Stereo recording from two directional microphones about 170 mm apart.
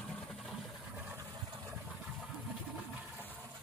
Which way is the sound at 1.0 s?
20° right (ahead or behind).